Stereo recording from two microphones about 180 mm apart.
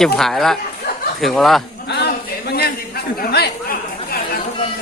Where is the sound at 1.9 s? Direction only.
65° left (ahead or behind).